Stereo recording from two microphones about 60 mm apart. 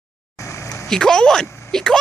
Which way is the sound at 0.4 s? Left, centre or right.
Left.